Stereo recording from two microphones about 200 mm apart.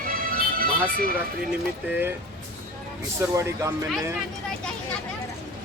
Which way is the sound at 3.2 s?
15° right (ahead or behind).